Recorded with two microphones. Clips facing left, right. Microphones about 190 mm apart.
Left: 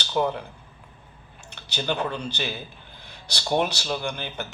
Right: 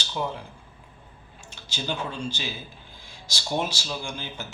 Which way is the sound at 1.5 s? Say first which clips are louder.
Left 4 dB; 65° left (ahead or behind).